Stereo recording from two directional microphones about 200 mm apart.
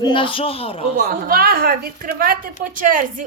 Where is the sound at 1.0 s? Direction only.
45° right (ahead or behind).